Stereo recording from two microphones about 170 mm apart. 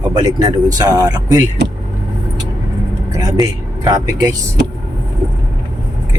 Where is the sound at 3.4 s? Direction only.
20° right (ahead or behind).